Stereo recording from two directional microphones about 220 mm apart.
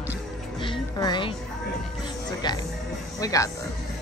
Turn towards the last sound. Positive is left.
turn(degrees=15)  # may be behind; listen again after turning